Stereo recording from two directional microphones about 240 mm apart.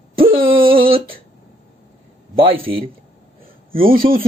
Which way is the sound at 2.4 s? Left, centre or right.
Right.